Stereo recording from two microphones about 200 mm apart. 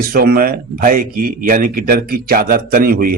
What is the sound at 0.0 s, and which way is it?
A man's voice, 50° right (ahead or behind).